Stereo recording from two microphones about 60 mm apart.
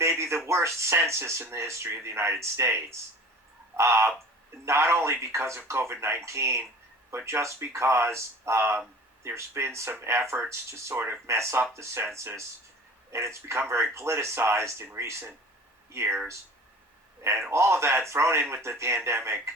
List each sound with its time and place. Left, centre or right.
0.0 s speech: right
10.9 s speech: right
11.3 s speech: right
13.1 s speech: right
15.9 s speech: right
17.5 s speech: right